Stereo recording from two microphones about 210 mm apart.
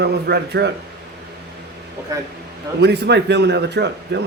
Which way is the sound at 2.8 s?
55° right (ahead or behind).